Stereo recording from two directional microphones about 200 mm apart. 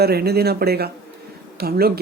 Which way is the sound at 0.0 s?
50° right (ahead or behind).